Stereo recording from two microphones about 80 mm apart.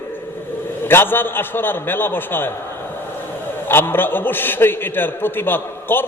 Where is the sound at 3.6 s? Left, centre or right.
Left.